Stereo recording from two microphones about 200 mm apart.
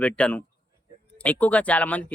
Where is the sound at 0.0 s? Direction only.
5° left (ahead or behind).